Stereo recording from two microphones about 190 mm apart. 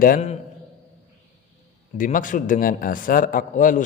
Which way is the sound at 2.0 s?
45° left (ahead or behind).